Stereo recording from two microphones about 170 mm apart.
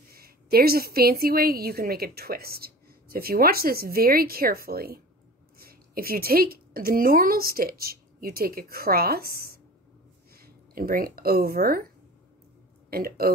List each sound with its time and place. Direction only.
0.1 s a woman's voice: 60° right (ahead or behind)
12.9 s a woman's voice: 60° right (ahead or behind)